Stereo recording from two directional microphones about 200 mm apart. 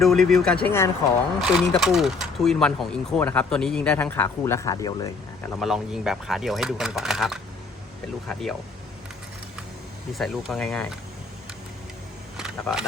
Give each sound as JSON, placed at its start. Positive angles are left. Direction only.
{"t": 0.0, "sound": "speech", "side_deg": 0}
{"t": 1.4, "sound": "speech", "side_deg": 0}
{"t": 5.5, "sound": "speech", "side_deg": 0}
{"t": 10.2, "sound": "speech", "side_deg": 0}
{"t": 12.4, "sound": "a sound", "side_deg": -5}